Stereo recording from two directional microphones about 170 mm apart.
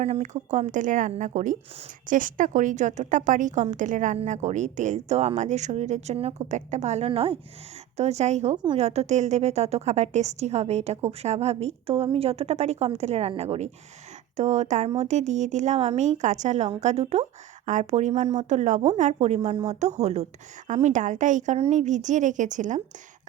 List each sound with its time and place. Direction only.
0.0 s a woman's voice: 40° right (ahead or behind)
8.5 s a woman's voice: 25° right (ahead or behind)
8.8 s a woman's voice: 40° right (ahead or behind)